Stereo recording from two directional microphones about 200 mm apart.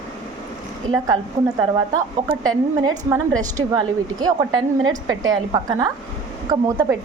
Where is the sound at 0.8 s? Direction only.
20° right (ahead or behind).